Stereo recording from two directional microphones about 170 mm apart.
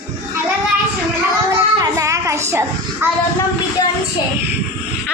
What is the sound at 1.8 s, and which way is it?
Child singing, 20° right (ahead or behind).